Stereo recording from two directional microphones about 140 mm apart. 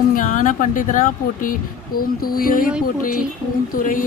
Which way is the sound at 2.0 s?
90° left.